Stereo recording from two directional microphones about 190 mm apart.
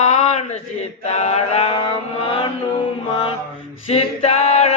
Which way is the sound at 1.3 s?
30° left (ahead or behind).